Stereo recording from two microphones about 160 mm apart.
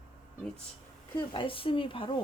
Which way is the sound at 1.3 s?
35° left (ahead or behind).